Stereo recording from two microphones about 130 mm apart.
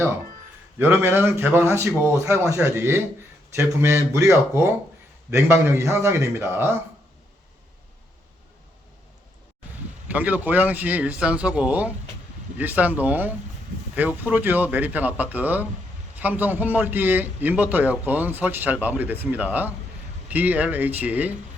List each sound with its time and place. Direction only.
0.8 s a man's voice: 20° right (ahead or behind)
10.1 s a man's voice: 10° right (ahead or behind)